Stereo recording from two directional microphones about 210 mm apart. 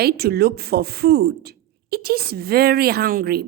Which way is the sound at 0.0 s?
50° right (ahead or behind).